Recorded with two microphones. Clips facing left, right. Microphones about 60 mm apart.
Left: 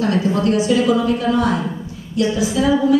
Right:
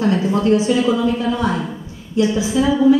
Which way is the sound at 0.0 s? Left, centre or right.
Right.